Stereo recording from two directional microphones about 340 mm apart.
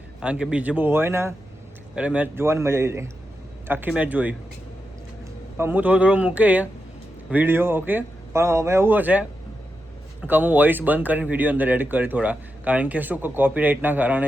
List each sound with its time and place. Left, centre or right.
0.2 s speech: centre
5.5 s speech: centre